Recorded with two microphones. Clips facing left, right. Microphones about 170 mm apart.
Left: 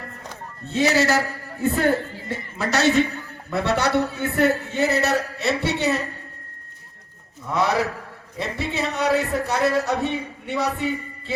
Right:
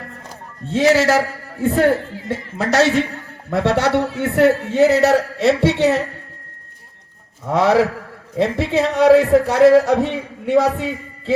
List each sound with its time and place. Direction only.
0.7 s a man's voice: 90° right
7.4 s a man's voice: 90° right